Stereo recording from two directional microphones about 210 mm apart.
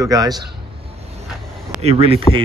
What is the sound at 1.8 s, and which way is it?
Speech, 30° right (ahead or behind).